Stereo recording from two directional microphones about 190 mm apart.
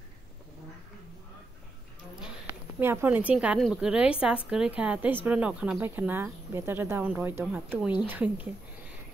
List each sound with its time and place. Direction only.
2.8 s speech: 10° right (ahead or behind)